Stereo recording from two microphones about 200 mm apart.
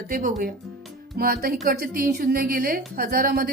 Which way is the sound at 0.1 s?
40° right (ahead or behind).